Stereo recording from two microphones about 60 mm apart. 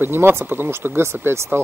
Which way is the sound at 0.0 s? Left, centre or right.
Right.